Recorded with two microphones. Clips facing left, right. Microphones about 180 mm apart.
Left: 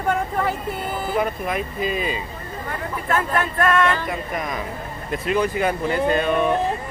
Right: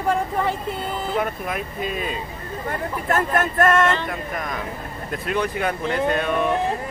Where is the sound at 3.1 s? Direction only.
45° right (ahead or behind).